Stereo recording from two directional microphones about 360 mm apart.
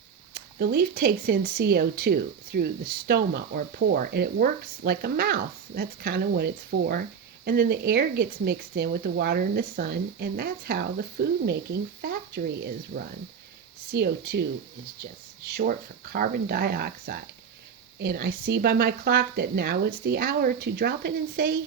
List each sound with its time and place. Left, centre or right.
0.3 s speech: right
15.4 s speech: right